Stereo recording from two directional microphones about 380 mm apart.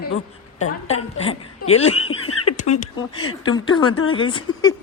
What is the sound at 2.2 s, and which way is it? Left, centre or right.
Frog, left.